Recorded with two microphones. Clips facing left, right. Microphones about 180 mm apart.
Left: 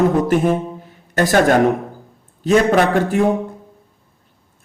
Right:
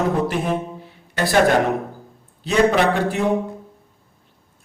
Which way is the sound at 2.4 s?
45° left (ahead or behind).